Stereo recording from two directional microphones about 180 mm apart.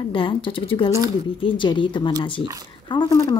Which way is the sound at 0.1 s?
30° left (ahead or behind).